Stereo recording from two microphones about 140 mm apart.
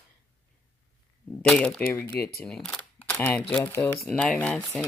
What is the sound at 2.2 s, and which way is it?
Speech, 90° left.